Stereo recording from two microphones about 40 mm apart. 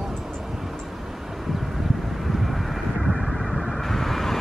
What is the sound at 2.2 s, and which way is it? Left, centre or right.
Vehicle, centre.